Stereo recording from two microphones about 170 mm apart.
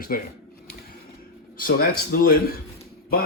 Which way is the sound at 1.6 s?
60° left (ahead or behind).